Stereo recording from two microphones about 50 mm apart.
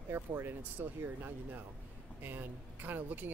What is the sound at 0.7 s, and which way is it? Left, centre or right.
Speech, right.